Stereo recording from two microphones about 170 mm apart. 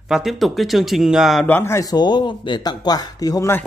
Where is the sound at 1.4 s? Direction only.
15° left (ahead or behind).